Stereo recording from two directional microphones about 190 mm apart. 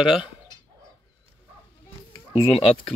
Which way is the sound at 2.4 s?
30° left (ahead or behind).